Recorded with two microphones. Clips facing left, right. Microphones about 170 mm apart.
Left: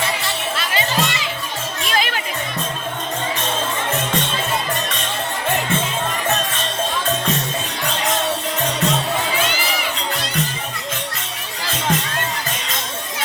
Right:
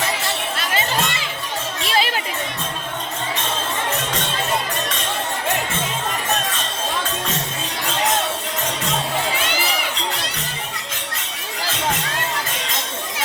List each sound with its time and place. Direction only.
0.5 s music: 45° right (ahead or behind)
1.9 s music: 30° right (ahead or behind)